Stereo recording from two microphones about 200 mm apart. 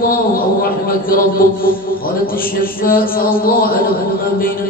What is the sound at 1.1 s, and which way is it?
Mantra, 45° left (ahead or behind).